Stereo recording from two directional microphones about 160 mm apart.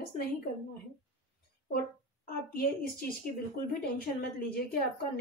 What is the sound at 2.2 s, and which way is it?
A woman's voice, 65° left (ahead or behind).